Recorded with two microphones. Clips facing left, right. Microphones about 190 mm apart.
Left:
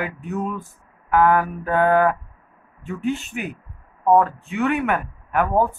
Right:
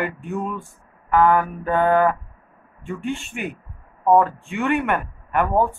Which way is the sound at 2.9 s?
40° left (ahead or behind).